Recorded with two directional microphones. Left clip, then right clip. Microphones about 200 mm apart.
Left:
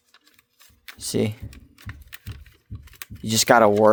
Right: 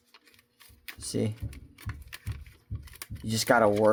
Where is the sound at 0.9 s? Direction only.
40° left (ahead or behind).